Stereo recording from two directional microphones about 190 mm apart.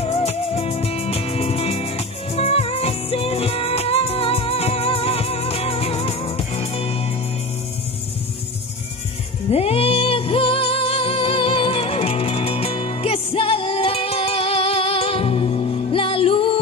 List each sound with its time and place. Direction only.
0.0 s music: 30° left (ahead or behind)
9.5 s music: 30° left (ahead or behind)